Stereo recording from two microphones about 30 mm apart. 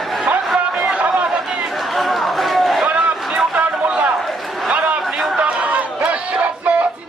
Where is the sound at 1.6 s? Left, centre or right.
Centre.